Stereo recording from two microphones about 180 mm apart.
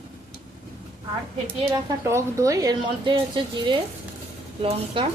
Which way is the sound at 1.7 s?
20° right (ahead or behind).